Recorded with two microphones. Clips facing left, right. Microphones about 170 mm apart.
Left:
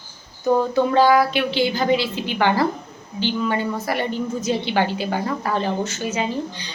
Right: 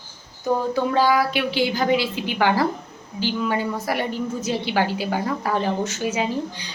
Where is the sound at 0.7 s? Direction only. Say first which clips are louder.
Left 4 dB; 10° right (ahead or behind).